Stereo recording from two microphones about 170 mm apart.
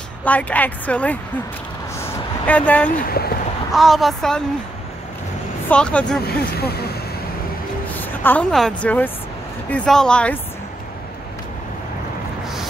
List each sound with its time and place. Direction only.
0.2 s a woman's voice: 10° left (ahead or behind)
2.0 s vehicle: 10° left (ahead or behind)
3.1 s speech: 65° left (ahead or behind)
3.7 s speech: centre (ahead or behind)
5.7 s speech: 5° left (ahead or behind)
6.2 s speech: 70° left (ahead or behind)
7.9 s a woman's voice: 10° left (ahead or behind)